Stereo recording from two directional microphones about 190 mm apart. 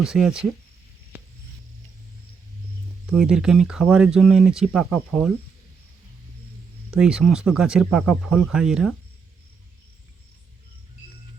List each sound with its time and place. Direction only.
0.0 s speech: 5° right (ahead or behind)
3.1 s speech: 5° right (ahead or behind)
6.9 s speech: 5° right (ahead or behind)